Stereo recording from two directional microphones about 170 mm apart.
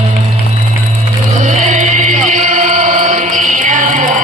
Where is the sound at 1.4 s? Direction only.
45° right (ahead or behind).